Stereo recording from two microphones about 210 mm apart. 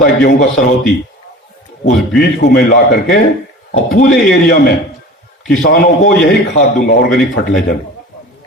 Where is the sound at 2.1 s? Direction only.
40° left (ahead or behind).